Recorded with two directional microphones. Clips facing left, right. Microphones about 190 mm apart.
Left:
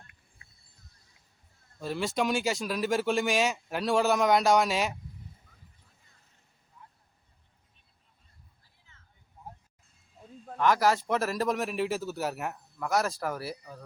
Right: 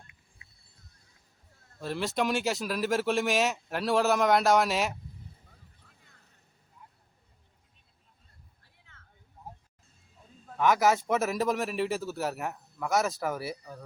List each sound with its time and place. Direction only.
1.8 s speech: centre (ahead or behind)
8.6 s a sound: 65° right (ahead or behind)
10.6 s speech: centre (ahead or behind)